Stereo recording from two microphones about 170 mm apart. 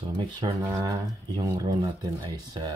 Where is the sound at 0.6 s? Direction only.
20° right (ahead or behind).